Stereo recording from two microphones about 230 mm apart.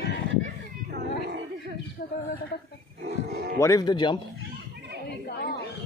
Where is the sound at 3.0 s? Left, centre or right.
Right.